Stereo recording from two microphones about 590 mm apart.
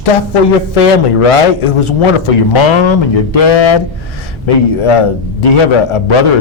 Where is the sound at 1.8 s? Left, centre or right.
Left.